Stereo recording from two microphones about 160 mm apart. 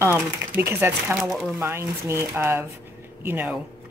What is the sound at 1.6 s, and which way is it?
A woman's voice, 15° right (ahead or behind).